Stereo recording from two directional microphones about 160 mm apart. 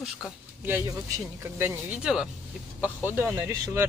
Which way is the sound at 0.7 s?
20° right (ahead or behind).